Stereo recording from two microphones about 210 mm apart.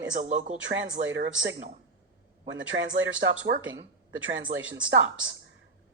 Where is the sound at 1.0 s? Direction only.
60° right (ahead or behind).